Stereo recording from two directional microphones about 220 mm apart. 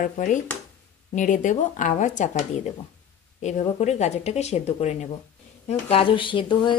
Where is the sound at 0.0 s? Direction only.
35° left (ahead or behind).